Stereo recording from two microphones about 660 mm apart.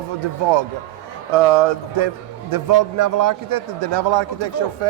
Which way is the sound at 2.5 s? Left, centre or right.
Right.